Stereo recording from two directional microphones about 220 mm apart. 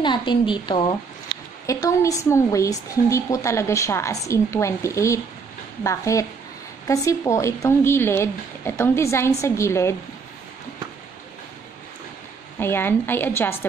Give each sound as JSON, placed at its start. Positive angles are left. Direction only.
{"t": 0.0, "sound": "a woman's voice", "side_deg": 20}
{"t": 12.5, "sound": "a woman's voice", "side_deg": 10}